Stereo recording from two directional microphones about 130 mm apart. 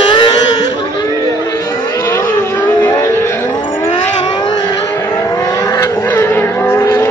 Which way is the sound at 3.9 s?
40° left (ahead or behind).